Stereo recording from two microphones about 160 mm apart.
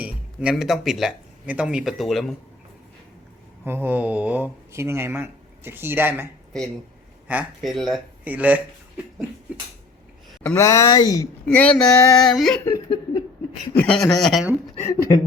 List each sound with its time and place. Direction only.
0.5 s speech: centre (ahead or behind)
3.6 s speech: 10° right (ahead or behind)
7.3 s speech: 5° right (ahead or behind)
10.4 s speech: 15° left (ahead or behind)
11.4 s speech: 5° left (ahead or behind)
12.7 s speech: 25° left (ahead or behind)
13.7 s speech: 5° left (ahead or behind)
14.8 s speech: 15° left (ahead or behind)